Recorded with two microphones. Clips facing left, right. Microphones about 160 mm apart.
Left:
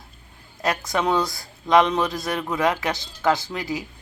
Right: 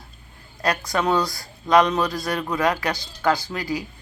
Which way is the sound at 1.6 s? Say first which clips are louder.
Even; 20° left (ahead or behind).